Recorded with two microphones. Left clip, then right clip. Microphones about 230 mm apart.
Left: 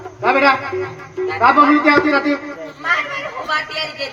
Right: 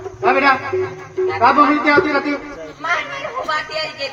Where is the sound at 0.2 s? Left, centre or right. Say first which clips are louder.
Left 1 dB; left.